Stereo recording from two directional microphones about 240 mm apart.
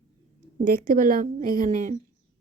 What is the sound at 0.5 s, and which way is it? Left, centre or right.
A woman's voice, right.